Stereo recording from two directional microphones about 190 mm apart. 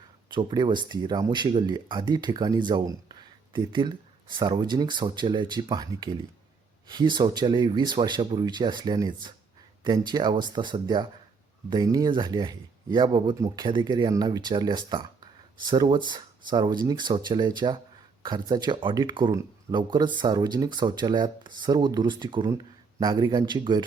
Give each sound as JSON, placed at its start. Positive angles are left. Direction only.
{"t": 0.3, "sound": "speech", "side_deg": -25}